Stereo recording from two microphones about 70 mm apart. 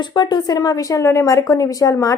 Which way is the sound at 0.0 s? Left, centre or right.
Left.